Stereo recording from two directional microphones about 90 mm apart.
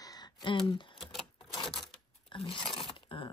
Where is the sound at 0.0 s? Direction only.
45° left (ahead or behind).